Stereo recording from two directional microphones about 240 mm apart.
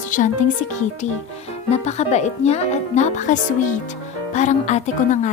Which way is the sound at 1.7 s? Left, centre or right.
Left.